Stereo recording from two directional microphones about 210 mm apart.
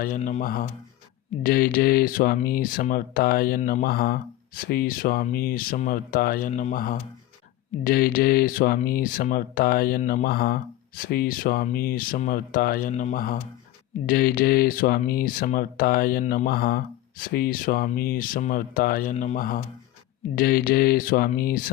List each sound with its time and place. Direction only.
0.0 s speech: 40° left (ahead or behind)